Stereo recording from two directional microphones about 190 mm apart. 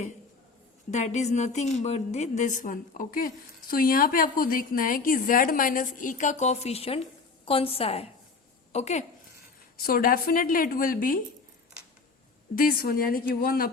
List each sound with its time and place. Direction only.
0.9 s a woman's voice: 35° left (ahead or behind)
9.7 s a woman's voice: 50° left (ahead or behind)
12.5 s a woman's voice: 50° left (ahead or behind)